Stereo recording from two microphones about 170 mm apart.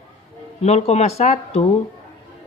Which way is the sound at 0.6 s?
40° left (ahead or behind).